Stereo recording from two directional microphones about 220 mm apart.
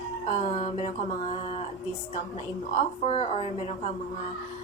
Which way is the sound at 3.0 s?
30° left (ahead or behind).